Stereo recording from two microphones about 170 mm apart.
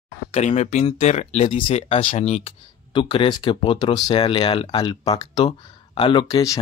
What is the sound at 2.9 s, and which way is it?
Speech, 30° left (ahead or behind).